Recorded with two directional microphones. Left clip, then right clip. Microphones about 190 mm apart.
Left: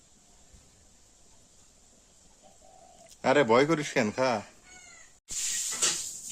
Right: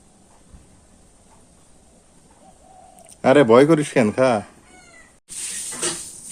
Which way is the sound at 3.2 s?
15° right (ahead or behind).